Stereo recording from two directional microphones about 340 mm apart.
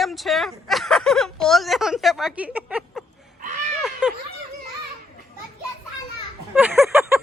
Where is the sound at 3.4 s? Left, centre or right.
Right.